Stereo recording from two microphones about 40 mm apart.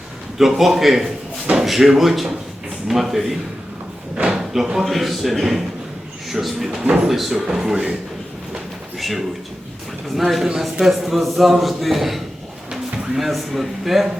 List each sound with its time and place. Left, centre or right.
0.3 s a man's voice: centre
4.2 s a sound: right
4.5 s speech: centre
4.9 s a man's voice: centre
6.7 s speech: right
7.1 s a man's voice: centre
7.4 s speech: centre
9.0 s a man's voice: centre